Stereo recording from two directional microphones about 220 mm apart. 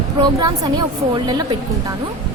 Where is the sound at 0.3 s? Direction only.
20° right (ahead or behind).